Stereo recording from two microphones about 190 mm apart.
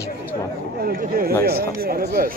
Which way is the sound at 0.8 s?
50° right (ahead or behind).